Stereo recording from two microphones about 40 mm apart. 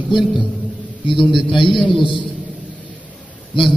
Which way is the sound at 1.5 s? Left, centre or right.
Centre.